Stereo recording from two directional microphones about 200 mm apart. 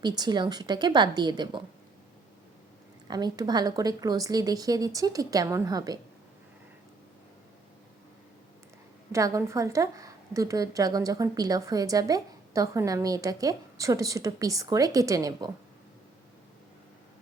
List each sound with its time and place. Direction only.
0.0 s speech: 20° right (ahead or behind)
3.1 s speech: 20° right (ahead or behind)
9.1 s a woman's voice: 15° right (ahead or behind)